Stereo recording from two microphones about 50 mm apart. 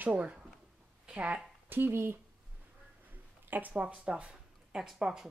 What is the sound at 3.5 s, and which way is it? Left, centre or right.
Speech, right.